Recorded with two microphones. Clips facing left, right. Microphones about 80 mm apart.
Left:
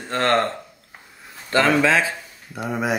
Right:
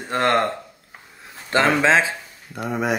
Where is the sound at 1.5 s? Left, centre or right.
Right.